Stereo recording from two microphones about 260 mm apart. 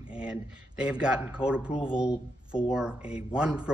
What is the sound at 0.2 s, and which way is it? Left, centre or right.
Speech, centre.